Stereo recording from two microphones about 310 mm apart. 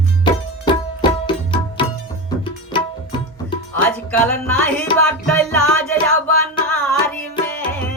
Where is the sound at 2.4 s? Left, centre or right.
Centre.